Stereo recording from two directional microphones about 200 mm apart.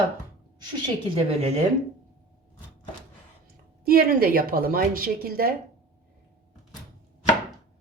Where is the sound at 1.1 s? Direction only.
30° right (ahead or behind).